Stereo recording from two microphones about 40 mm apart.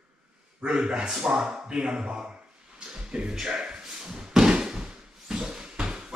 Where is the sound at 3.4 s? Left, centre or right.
Centre.